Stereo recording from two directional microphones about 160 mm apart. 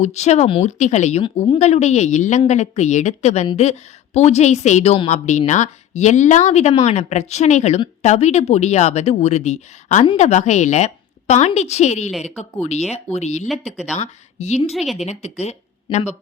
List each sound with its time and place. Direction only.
0.0 s a woman's voice: 45° left (ahead or behind)
13.5 s speech: 5° right (ahead or behind)
13.9 s a woman's voice: 45° left (ahead or behind)
14.7 s speech: centre (ahead or behind)
15.2 s speech: 45° left (ahead or behind)